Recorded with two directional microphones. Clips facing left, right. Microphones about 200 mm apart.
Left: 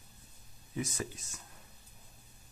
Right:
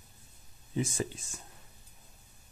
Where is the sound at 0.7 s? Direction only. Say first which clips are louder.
Right 5 dB; 30° right (ahead or behind).